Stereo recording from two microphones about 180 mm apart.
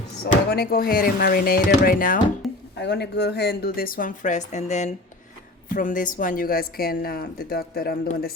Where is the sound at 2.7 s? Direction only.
70° left (ahead or behind).